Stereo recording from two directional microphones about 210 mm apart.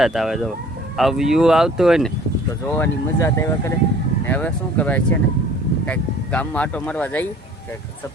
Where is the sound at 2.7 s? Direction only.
10° left (ahead or behind).